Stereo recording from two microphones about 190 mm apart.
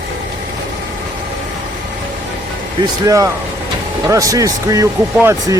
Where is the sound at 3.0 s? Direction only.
15° right (ahead or behind).